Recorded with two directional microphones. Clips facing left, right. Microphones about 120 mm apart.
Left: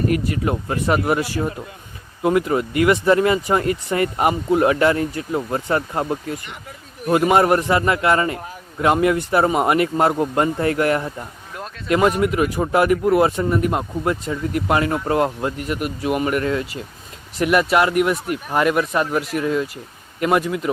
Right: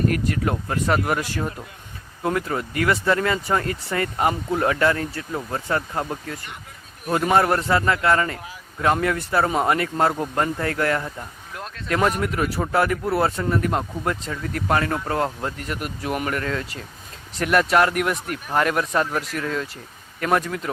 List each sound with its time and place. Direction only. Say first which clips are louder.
0.1 s speech: left 3 dB; 5° left (ahead or behind)